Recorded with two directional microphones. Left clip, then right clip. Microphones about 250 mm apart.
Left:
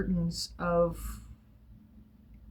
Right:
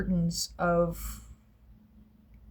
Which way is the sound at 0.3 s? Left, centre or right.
Right.